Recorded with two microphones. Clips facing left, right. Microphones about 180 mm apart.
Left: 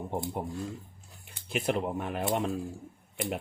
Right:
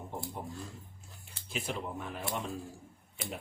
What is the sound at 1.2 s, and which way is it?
Speech, 60° left (ahead or behind).